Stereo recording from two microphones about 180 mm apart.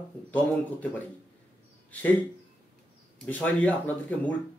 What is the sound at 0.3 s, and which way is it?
Speech, 10° left (ahead or behind).